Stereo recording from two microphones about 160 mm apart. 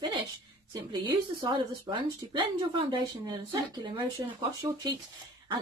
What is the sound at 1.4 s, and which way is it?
A woman's voice, 30° right (ahead or behind).